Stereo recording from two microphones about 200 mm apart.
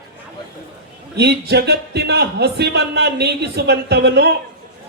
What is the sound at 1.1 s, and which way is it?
A man's voice, 55° right (ahead or behind).